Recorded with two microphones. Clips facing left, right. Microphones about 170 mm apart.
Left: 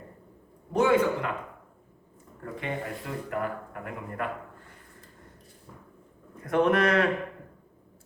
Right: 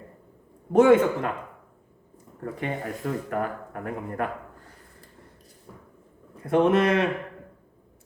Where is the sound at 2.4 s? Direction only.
45° right (ahead or behind).